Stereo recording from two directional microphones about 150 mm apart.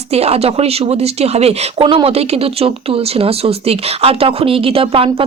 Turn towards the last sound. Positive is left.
turn(degrees=-40)  # may be behind; listen again after turning